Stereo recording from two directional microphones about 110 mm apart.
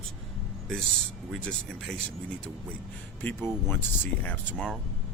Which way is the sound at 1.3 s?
10° left (ahead or behind).